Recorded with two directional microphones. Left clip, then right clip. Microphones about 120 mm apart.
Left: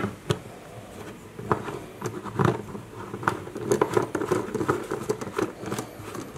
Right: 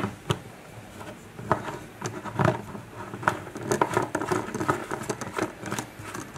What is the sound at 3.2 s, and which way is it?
Patter, centre (ahead or behind).